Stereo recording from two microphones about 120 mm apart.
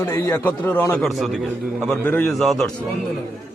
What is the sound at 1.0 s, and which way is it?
A man's voice, centre (ahead or behind).